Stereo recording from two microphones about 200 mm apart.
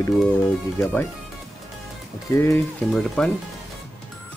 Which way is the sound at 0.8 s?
10° left (ahead or behind).